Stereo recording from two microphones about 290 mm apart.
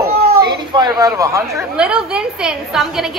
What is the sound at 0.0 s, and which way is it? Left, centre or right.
Cat, right.